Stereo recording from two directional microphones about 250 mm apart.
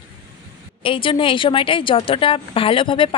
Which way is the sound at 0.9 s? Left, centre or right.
Left.